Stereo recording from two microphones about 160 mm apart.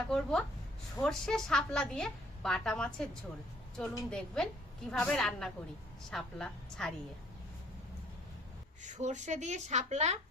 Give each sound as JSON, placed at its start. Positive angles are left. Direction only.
{"t": 0.1, "sound": "a woman's voice", "side_deg": 5}
{"t": 8.8, "sound": "a woman's voice", "side_deg": -50}